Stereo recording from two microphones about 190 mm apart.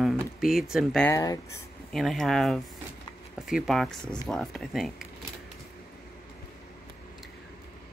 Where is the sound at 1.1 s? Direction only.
20° left (ahead or behind).